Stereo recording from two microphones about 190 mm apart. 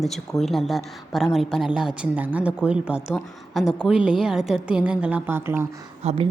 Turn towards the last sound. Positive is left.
turn(degrees=-35)  # may be behind; listen again after turning